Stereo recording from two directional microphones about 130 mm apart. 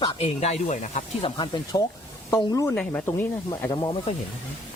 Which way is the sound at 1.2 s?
40° left (ahead or behind).